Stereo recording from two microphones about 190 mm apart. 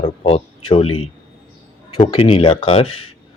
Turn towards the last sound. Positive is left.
turn(degrees=30)  # may be behind; listen again after turning